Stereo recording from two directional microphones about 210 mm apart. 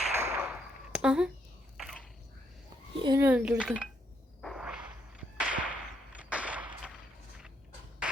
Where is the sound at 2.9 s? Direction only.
20° right (ahead or behind).